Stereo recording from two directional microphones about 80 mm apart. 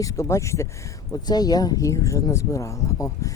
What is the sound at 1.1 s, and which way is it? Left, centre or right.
Speech, left.